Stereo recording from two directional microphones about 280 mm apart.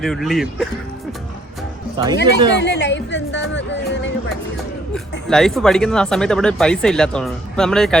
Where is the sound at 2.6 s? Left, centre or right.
Left.